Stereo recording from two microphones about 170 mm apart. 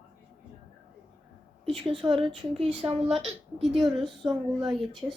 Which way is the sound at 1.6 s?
30° right (ahead or behind).